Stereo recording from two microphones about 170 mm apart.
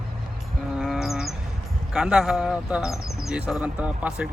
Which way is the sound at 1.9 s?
5° right (ahead or behind).